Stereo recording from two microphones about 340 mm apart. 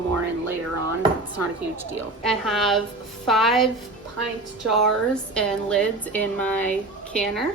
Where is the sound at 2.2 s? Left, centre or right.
Centre.